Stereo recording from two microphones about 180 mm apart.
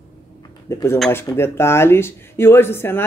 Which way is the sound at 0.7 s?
15° left (ahead or behind).